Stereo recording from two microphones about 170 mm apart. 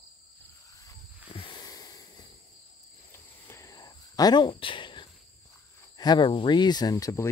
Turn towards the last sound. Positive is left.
turn(degrees=20)  # may be behind; listen again after turning